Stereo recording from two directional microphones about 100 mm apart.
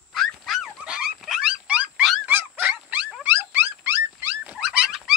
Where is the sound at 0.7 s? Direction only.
10° right (ahead or behind).